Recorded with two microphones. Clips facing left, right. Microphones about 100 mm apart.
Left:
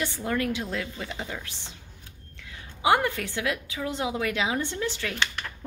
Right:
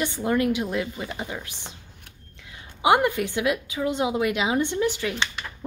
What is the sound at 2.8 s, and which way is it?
A woman's voice, 15° right (ahead or behind).